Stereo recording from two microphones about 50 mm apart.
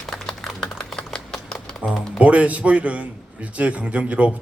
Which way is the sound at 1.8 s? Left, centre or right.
Right.